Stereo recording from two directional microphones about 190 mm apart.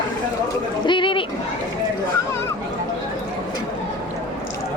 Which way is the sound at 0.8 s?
25° left (ahead or behind).